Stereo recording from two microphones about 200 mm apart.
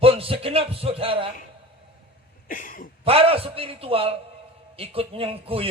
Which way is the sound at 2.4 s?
40° left (ahead or behind).